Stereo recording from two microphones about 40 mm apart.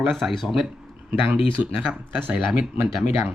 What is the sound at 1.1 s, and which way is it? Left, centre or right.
Speech, right.